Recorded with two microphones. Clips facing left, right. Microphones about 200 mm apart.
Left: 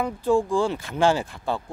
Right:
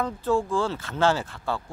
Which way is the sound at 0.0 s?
15° left (ahead or behind).